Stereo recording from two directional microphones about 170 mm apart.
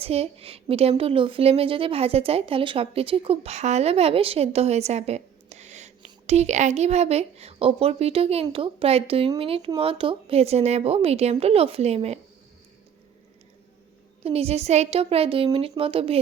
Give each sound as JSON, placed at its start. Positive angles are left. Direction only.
{"t": 0.0, "sound": "a woman's voice", "side_deg": -35}
{"t": 14.3, "sound": "a woman's voice", "side_deg": -35}